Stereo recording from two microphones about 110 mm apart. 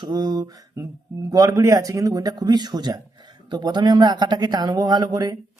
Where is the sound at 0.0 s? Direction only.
35° right (ahead or behind).